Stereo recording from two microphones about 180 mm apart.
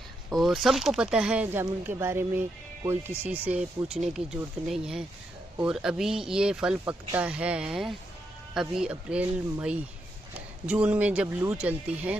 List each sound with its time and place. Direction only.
0.3 s speech: centre (ahead or behind)